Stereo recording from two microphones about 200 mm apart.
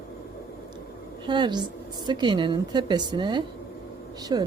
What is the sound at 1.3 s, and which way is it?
Speech, 20° right (ahead or behind).